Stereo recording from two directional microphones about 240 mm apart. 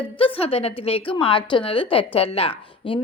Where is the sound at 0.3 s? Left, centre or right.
Left.